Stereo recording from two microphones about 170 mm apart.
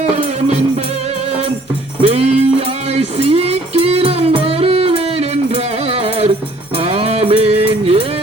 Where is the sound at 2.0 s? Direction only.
35° right (ahead or behind).